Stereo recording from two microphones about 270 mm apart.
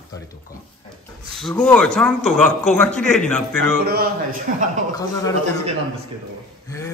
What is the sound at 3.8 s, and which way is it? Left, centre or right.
Speech, right.